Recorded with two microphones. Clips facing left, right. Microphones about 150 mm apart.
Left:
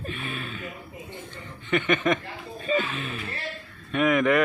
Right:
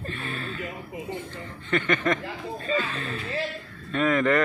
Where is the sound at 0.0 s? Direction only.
15° left (ahead or behind).